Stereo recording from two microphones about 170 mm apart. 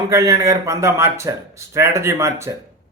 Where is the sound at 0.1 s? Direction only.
20° right (ahead or behind).